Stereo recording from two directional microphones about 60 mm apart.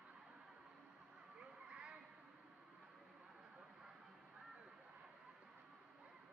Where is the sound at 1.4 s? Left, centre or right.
Centre.